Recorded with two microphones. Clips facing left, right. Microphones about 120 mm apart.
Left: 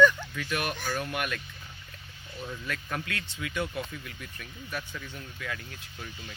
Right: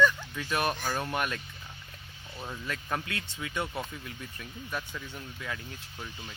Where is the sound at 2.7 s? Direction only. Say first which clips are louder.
Right 2 dB; 30° right (ahead or behind).